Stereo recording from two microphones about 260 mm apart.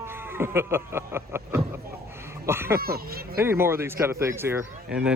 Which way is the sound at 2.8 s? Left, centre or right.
Right.